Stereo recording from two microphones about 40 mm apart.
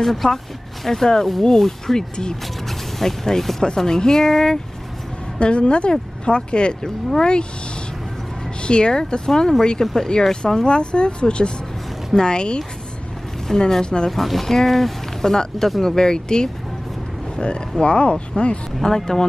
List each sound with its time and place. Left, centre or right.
0.0 s speech: centre
5.4 s speech: left
8.6 s speech: left
14.1 s speech: centre; by 18.6 s left
18.8 s speech: centre